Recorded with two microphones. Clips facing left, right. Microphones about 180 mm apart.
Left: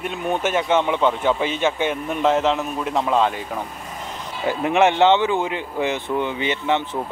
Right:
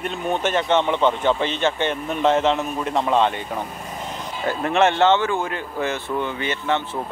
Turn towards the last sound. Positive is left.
turn(degrees=15)  # may be behind; listen again after turning